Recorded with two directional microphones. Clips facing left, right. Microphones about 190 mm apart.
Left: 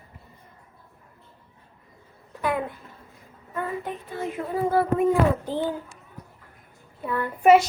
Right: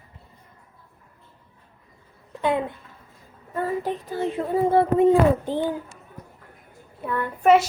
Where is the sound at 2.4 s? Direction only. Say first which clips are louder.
Right 3 dB; 25° right (ahead or behind).